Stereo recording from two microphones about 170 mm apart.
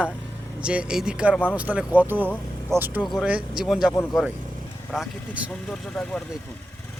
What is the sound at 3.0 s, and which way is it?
Speech, centre (ahead or behind).